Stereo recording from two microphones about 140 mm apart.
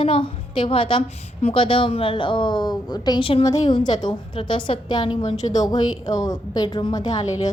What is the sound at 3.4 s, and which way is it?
A woman's voice, 25° left (ahead or behind).